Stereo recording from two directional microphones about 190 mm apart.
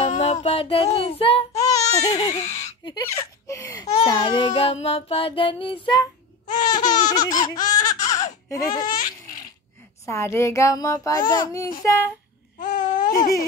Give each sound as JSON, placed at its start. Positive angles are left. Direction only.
{"t": 0.1, "sound": "music", "side_deg": 35}
{"t": 0.9, "sound": "a child's voice", "side_deg": 30}
{"t": 2.8, "sound": "a child's voice", "side_deg": 20}
{"t": 4.0, "sound": "child singing", "side_deg": 20}
{"t": 10.0, "sound": "a child's voice", "side_deg": 15}
{"t": 12.5, "sound": "babbling", "side_deg": 45}